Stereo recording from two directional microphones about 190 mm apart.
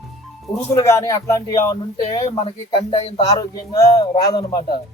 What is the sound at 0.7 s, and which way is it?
A man's voice, 15° left (ahead or behind).